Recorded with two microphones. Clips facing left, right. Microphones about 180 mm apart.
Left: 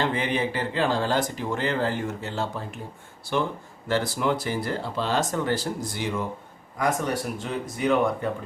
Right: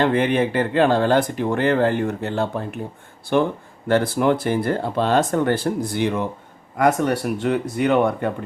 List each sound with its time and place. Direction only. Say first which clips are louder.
0.0 s speech: right 7 dB; 60° right (ahead or behind)